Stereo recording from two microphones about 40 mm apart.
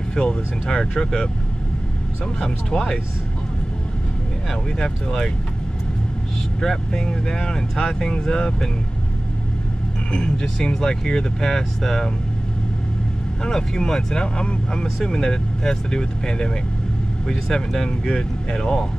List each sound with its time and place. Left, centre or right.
0.1 s speech: centre
2.7 s speech: left
6.6 s speech: centre
10.1 s speech: centre
13.4 s speech: centre